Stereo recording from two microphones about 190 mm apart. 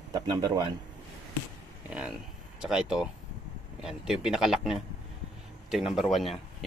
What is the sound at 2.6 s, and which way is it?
A man's voice, 5° right (ahead or behind).